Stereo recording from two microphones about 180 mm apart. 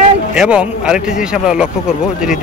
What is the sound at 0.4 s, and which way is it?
A man's voice, 5° right (ahead or behind).